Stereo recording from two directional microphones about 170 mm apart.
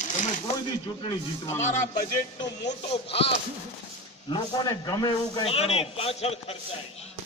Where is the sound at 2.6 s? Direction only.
35° left (ahead or behind).